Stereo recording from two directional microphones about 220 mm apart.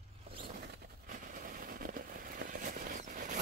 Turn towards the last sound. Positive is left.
turn(degrees=-35)  # may be behind; listen again after turning